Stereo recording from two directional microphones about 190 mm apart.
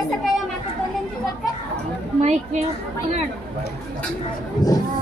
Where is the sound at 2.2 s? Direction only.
35° right (ahead or behind).